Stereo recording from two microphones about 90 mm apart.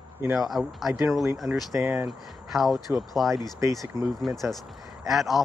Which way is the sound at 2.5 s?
Centre (ahead or behind).